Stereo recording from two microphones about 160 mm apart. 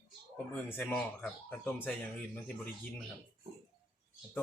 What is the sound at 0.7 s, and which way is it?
Speech, 15° left (ahead or behind).